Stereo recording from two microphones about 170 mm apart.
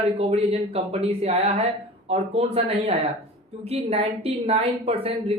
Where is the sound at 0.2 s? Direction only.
40° right (ahead or behind).